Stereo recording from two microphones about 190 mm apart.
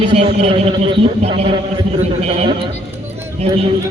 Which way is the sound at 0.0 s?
30° right (ahead or behind).